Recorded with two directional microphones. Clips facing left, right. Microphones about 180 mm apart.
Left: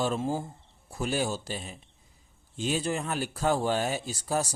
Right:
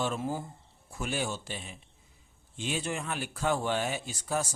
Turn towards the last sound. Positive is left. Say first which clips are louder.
# left 3 dB
turn(degrees=35)  # may be behind; listen again after turning